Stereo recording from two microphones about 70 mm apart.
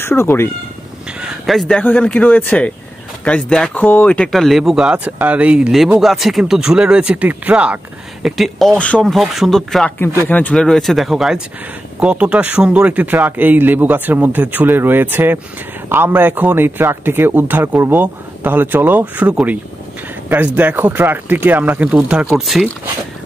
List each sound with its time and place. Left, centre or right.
0.0 s speech: left
1.4 s speech: centre
1.8 s speech: left
3.3 s speech: centre
4.3 s speech: centre
5.9 s speech: centre
8.2 s speech: centre
8.7 s speech: centre
9.2 s speech: centre
10.2 s speech: left
10.5 s speech: centre; by 21.8 s right
21.8 s speech: centre
22.3 s speech: centre